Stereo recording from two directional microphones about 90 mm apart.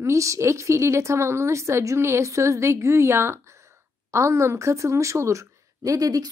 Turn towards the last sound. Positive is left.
turn(degrees=-40)  # may be behind; listen again after turning